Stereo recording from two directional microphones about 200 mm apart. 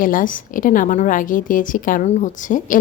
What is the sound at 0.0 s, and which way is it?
A woman's voice, 45° left (ahead or behind).